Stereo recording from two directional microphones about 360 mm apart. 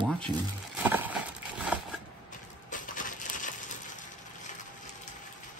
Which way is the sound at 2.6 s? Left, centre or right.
Left.